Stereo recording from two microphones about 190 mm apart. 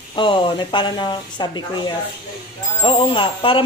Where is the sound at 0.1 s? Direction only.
25° left (ahead or behind).